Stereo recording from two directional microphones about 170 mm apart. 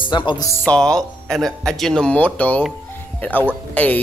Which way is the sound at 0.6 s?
5° left (ahead or behind).